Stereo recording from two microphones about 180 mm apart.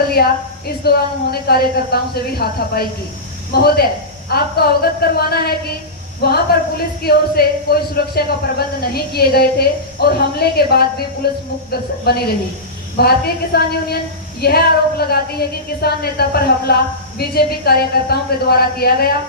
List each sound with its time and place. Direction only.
0.2 s speech: 60° left (ahead or behind)